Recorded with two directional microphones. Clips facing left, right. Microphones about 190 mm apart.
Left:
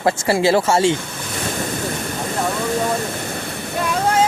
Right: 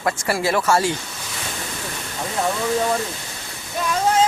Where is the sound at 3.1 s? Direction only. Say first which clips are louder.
Left 10 dB; 60° left (ahead or behind).